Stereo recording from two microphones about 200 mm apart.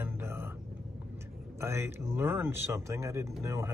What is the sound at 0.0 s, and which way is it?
Vehicle, 10° right (ahead or behind).